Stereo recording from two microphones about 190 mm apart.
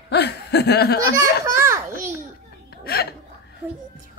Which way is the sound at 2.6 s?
55° left (ahead or behind).